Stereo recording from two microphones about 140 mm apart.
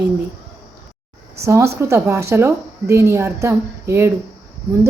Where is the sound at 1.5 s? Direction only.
20° right (ahead or behind).